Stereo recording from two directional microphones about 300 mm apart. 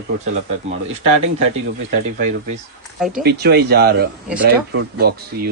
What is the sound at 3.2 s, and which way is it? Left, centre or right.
Speech, right.